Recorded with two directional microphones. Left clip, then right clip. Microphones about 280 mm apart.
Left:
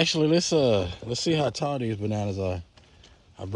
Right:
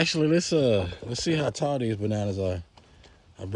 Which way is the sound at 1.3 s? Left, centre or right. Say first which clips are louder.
Right 1 dB; centre.